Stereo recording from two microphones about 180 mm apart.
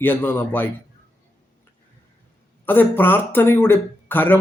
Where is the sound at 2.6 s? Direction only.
10° left (ahead or behind).